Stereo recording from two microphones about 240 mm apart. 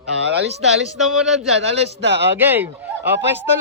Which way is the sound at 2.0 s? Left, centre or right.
Right.